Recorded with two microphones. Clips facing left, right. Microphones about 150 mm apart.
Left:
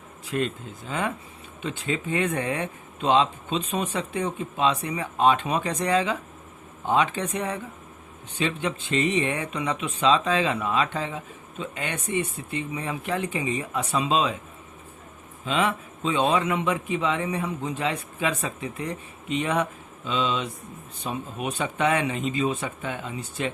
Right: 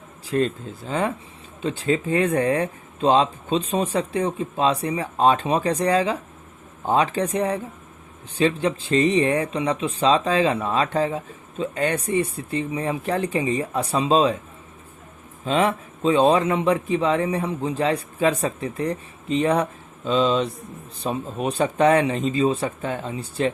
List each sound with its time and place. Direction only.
0.3 s speech: 35° right (ahead or behind)
15.4 s speech: 35° right (ahead or behind)